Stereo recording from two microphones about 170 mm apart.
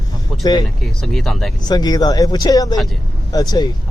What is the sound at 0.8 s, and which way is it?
Speech, centre (ahead or behind).